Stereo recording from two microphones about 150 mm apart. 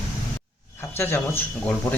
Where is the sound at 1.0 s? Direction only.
15° left (ahead or behind).